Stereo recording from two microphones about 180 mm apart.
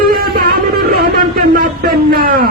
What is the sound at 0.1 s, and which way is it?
Music, 55° right (ahead or behind).